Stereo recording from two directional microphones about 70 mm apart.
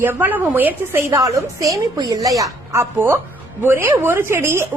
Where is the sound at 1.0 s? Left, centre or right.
Right.